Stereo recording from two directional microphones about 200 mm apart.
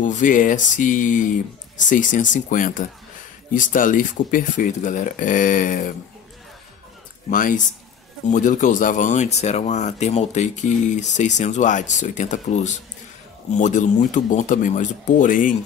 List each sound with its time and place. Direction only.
0.0 s speech: 40° left (ahead or behind)
7.2 s speech: 40° left (ahead or behind)